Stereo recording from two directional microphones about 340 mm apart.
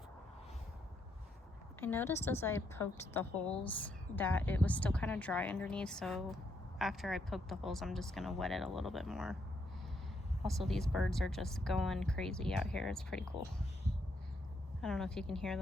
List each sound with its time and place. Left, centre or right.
1.8 s a woman's voice: centre
10.4 s a woman's voice: centre
14.8 s a woman's voice: centre